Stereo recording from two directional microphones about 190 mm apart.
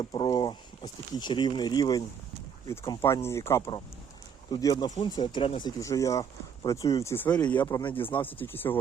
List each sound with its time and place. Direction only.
0.0 s speech: 25° left (ahead or behind); by 7.4 s 10° left (ahead or behind)
7.6 s speech: 25° left (ahead or behind)
7.9 s speech: 10° left (ahead or behind)